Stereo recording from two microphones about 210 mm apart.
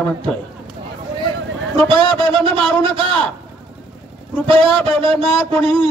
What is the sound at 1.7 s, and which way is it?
A man's voice, 25° right (ahead or behind).